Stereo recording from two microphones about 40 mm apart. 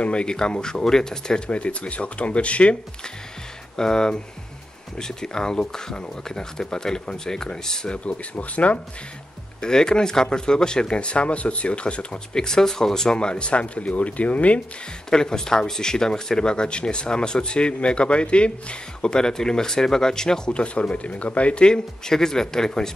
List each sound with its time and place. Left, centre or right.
0.0 s speech: left
1.5 s speech: left
3.7 s speech: centre
8.0 s speech: left
9.6 s speech: centre
12.4 s speech: centre; by 14.6 s left
15.0 s speech: centre